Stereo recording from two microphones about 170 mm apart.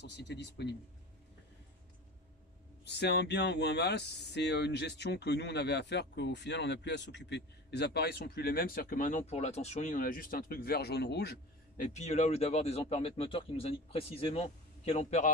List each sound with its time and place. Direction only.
0.0 s speech: 90° left
2.8 s speech: 80° left
11.7 s speech: 45° left (ahead or behind)